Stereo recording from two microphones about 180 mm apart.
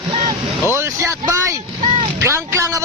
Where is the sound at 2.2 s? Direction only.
15° right (ahead or behind).